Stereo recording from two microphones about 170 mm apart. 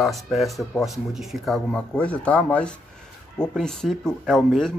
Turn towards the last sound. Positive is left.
turn(degrees=0)  # may be behind; listen again after turning